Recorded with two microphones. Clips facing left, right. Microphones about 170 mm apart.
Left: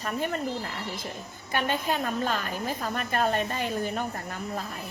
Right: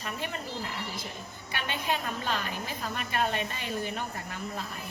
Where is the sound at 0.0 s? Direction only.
45° left (ahead or behind).